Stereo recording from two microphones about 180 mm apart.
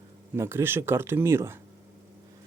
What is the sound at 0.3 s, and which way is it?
Speech, 15° right (ahead or behind).